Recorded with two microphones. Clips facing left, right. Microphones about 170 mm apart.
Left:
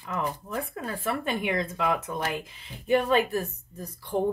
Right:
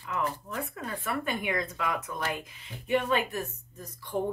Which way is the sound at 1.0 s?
25° left (ahead or behind).